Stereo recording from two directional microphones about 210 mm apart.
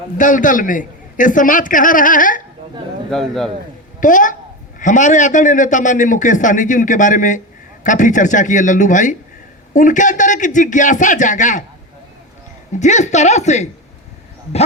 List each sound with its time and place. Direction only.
0.2 s a man's voice: 40° left (ahead or behind)
3.1 s a man's voice: centre (ahead or behind)
4.0 s a man's voice: 40° left (ahead or behind)
12.8 s a man's voice: 35° left (ahead or behind)